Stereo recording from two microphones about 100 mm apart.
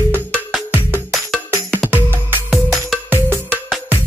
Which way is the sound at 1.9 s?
20° right (ahead or behind).